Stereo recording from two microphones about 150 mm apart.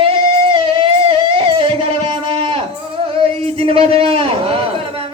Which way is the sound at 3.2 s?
40° right (ahead or behind).